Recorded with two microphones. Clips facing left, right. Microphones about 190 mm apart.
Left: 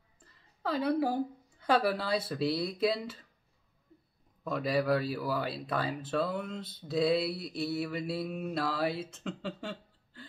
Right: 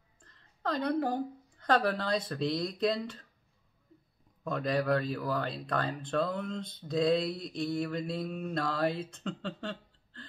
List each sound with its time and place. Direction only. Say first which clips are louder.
0.2 s a woman's voice: right 1 dB; 5° left (ahead or behind)
4.5 s speech: even; 5° left (ahead or behind)